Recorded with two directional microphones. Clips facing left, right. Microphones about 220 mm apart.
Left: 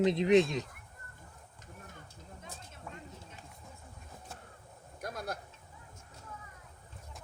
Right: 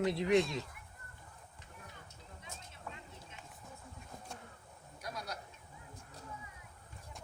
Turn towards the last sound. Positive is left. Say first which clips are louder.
# left 5 dB
turn(degrees=50)  # may be behind; listen again after turning